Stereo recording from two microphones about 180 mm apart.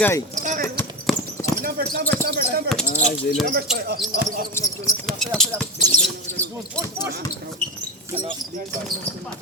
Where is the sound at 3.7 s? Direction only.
60° right (ahead or behind).